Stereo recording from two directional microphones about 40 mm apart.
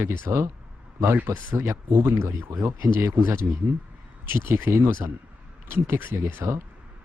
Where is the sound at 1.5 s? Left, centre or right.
Right.